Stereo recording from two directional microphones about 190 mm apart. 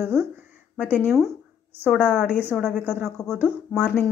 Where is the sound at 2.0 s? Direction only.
5° right (ahead or behind).